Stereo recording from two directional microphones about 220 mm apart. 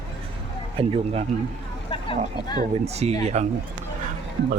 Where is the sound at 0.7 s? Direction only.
25° right (ahead or behind).